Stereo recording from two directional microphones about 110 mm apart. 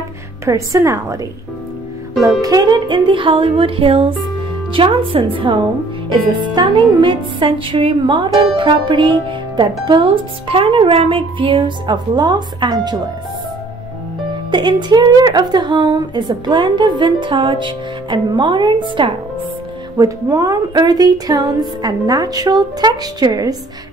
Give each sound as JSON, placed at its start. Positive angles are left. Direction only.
{"t": 0.5, "sound": "a woman's voice", "side_deg": -30}
{"t": 2.4, "sound": "a woman's voice", "side_deg": -35}
{"t": 14.5, "sound": "a woman's voice", "side_deg": -45}
{"t": 20.0, "sound": "a woman's voice", "side_deg": -30}